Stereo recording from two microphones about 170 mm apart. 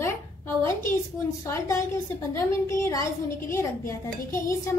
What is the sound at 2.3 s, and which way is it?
A woman's voice, 15° left (ahead or behind).